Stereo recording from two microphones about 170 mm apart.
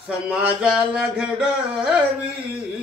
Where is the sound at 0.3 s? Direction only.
5° right (ahead or behind).